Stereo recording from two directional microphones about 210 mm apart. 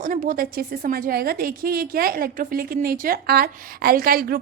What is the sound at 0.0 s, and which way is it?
A woman's voice, 40° right (ahead or behind).